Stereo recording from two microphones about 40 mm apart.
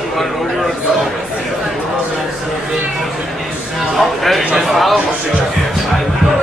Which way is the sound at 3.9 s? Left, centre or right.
Centre.